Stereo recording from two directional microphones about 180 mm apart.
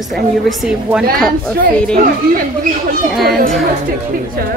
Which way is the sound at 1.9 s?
55° right (ahead or behind).